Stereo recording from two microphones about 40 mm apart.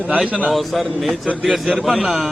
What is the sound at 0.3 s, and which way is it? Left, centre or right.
Speech, right.